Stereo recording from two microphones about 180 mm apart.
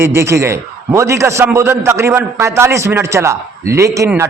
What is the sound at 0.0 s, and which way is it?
A man's voice, 15° right (ahead or behind).